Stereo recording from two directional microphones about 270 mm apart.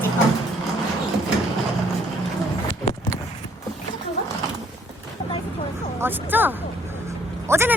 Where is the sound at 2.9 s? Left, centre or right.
Left.